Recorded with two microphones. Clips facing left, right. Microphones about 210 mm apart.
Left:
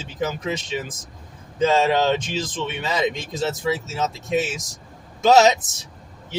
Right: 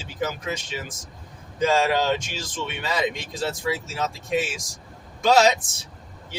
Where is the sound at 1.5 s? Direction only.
20° left (ahead or behind).